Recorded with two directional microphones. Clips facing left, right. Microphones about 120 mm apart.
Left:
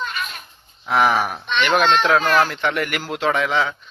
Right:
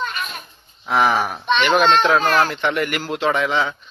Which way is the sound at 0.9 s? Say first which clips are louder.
Even; centre (ahead or behind).